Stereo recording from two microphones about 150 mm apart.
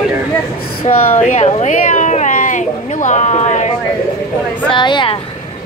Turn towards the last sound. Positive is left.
turn(degrees=30)  # may be behind; listen again after turning